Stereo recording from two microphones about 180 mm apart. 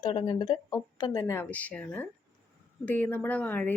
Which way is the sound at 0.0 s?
25° left (ahead or behind).